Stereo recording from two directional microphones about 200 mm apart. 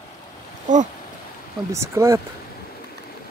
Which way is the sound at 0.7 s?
40° right (ahead or behind).